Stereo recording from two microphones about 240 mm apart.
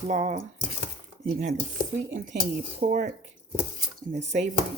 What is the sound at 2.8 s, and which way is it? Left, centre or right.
Speech, right.